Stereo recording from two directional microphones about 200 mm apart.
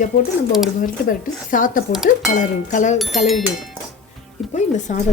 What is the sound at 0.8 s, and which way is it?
Speech, 45° left (ahead or behind).